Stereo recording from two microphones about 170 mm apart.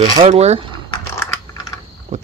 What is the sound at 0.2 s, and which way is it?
Speech, 40° right (ahead or behind).